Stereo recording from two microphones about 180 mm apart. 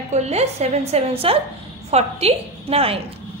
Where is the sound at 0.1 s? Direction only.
35° right (ahead or behind).